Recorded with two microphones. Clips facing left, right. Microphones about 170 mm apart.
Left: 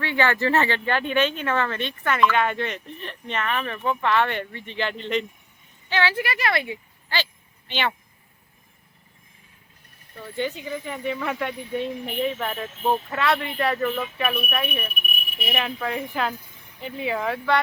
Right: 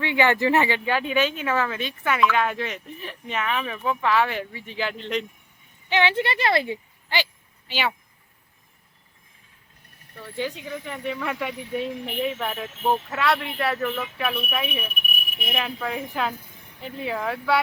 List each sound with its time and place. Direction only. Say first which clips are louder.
0.0 s speech: right 2 dB; 15° right (ahead or behind); by 5.2 s centre (ahead or behind)
5.9 s speech: right 2 dB; 20° right (ahead or behind)
7.7 s speech: even; 5° right (ahead or behind)
10.2 s speech: left 2 dB; centre (ahead or behind)
14.5 s speech: left 1 dB; 5° right (ahead or behind)